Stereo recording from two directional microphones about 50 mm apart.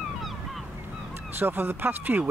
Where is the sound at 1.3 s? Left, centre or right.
Right.